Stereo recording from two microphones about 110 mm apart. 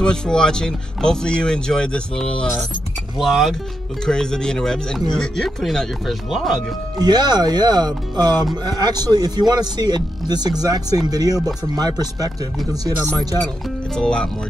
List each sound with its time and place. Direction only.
0.0 s speech: 5° left (ahead or behind)
7.0 s speech: 40° right (ahead or behind)
13.9 s speech: 10° left (ahead or behind)